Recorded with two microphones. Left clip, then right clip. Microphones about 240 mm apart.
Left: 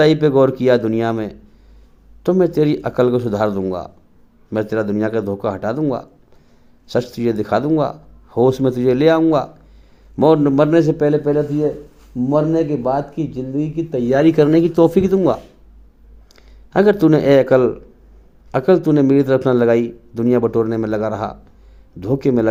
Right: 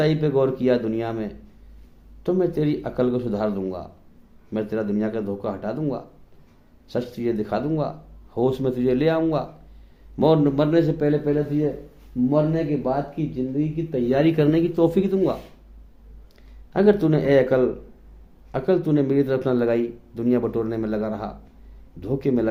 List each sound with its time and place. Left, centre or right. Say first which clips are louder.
0.0 s speech: left 8 dB; left